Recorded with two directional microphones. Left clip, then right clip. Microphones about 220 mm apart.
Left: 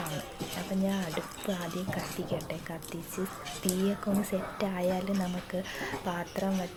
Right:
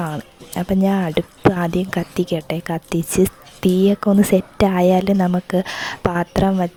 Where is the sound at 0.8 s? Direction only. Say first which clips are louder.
Right 15 dB; 50° right (ahead or behind).